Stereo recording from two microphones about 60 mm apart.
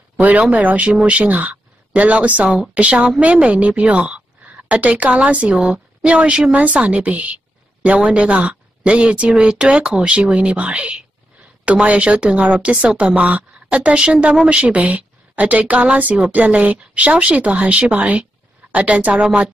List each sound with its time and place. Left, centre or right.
0.2 s a woman's voice: right